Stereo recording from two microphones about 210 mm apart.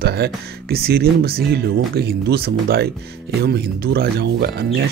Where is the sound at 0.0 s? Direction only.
50° right (ahead or behind).